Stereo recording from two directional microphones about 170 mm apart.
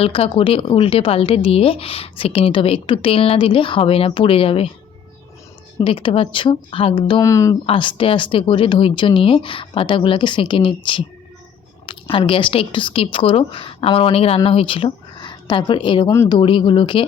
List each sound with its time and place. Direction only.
0.0 s a woman's voice: 35° left (ahead or behind)
5.8 s a woman's voice: 30° left (ahead or behind)
7.3 s speech: 20° left (ahead or behind)
7.7 s a woman's voice: 30° left (ahead or behind)